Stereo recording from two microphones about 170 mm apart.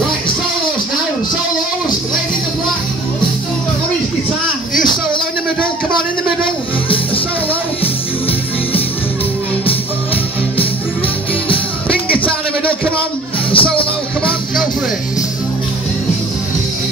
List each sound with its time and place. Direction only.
7.8 s music: 10° left (ahead or behind)
12.3 s a sound: 5° left (ahead or behind)
13.5 s music: 30° left (ahead or behind)